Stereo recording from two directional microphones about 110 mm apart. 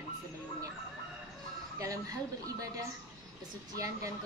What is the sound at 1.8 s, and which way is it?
Speech, 30° right (ahead or behind).